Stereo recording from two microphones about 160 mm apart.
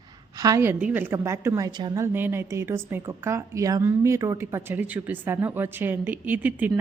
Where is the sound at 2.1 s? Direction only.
15° right (ahead or behind).